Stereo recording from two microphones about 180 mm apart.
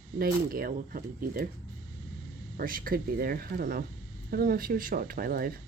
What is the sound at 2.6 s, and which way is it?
Speech, 55° right (ahead or behind).